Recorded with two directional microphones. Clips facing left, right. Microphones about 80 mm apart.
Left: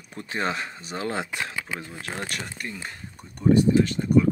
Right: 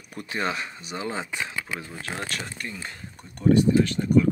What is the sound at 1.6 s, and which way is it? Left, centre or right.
Speech, left.